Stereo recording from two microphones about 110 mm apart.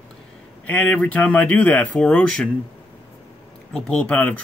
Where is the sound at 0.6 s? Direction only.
15° left (ahead or behind).